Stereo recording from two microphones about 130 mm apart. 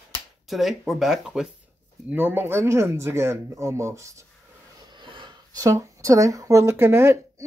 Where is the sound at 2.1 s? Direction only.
15° right (ahead or behind).